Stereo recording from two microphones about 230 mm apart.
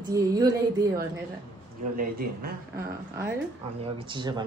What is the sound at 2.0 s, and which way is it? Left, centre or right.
Speech, right.